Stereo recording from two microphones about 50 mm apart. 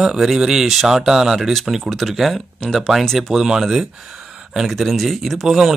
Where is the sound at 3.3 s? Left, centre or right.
Centre.